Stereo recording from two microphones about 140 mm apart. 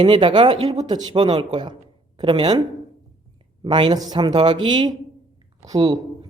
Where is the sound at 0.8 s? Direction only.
30° right (ahead or behind).